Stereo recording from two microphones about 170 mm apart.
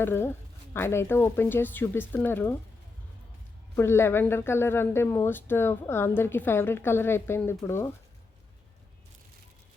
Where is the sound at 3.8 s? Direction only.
15° left (ahead or behind).